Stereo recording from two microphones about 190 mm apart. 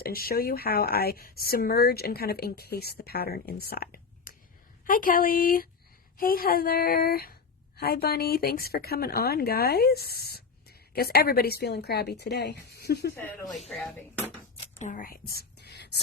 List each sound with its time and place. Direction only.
0.0 s speech: 50° left (ahead or behind)
13.5 s speech: centre (ahead or behind)
14.8 s whispering: 45° left (ahead or behind); by 16.0 s 60° left (ahead or behind)